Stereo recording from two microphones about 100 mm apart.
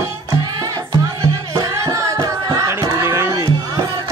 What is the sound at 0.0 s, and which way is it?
Music, 30° right (ahead or behind).